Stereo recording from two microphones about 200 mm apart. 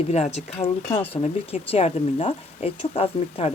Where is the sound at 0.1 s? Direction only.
35° left (ahead or behind).